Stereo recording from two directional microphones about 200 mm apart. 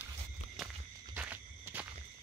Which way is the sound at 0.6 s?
Centre (ahead or behind).